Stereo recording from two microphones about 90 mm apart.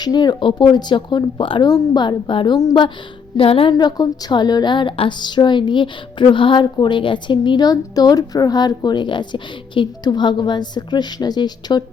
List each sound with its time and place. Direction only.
0.0 s a woman's voice: 50° left (ahead or behind); by 1.6 s 70° left (ahead or behind)
1.6 s a woman's voice: 45° left (ahead or behind); by 2.6 s 65° left (ahead or behind)
3.3 s a woman's voice: 90° left
3.8 s a woman's voice: 50° left (ahead or behind)